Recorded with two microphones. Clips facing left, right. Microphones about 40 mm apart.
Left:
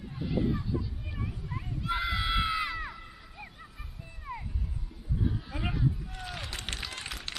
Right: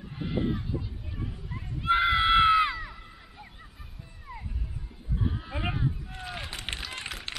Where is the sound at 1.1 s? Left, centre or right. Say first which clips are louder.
Even; centre.